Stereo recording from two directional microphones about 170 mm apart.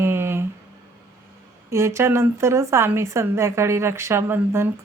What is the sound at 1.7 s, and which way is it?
A woman's voice, 15° right (ahead or behind).